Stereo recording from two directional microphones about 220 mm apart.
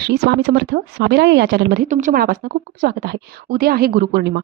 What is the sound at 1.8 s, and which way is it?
A woman's voice, 35° right (ahead or behind).